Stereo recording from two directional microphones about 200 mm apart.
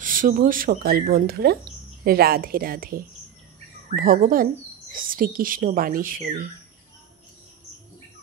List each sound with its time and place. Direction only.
0.0 s speech: 45° right (ahead or behind)